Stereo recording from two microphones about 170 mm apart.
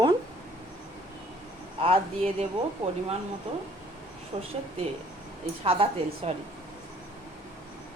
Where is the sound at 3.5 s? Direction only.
35° right (ahead or behind).